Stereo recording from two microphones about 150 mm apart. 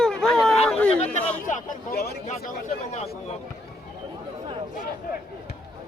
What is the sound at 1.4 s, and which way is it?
Speech, 75° left (ahead or behind).